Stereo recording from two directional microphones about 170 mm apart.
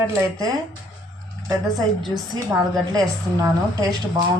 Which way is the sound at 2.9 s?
20° right (ahead or behind).